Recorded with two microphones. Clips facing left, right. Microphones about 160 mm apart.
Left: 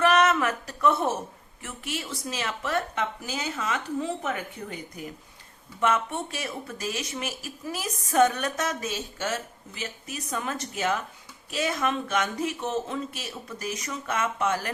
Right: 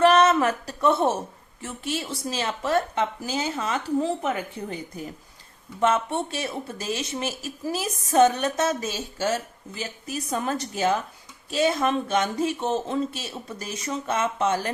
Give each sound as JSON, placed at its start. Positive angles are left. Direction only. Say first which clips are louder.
{"t": 0.0, "sound": "a sound", "louder": "right 4 dB", "side_deg": -30}
{"t": 1.6, "sound": "a woman's voice", "louder": "right 5 dB", "side_deg": -30}
{"t": 5.8, "sound": "speech", "louder": "right 3 dB", "side_deg": -30}